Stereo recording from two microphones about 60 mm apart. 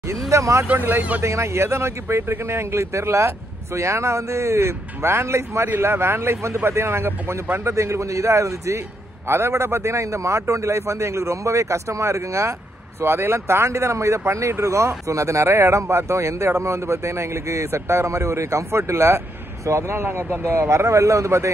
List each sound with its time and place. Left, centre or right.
0.1 s a man's voice: right
0.7 s speech: right
1.2 s a man's voice: right
13.0 s speech: right
20.6 s a man's voice: right